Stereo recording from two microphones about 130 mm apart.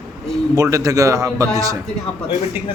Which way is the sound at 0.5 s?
25° right (ahead or behind).